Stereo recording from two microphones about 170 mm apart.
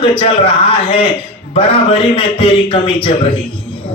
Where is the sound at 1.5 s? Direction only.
35° left (ahead or behind).